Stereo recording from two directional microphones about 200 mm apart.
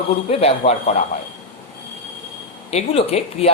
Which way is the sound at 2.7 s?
30° left (ahead or behind).